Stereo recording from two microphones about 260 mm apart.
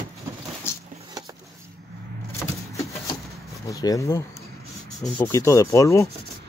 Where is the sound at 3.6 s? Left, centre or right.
Centre.